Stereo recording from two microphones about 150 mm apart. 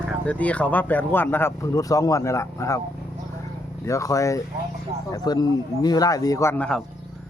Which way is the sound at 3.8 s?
20° left (ahead or behind).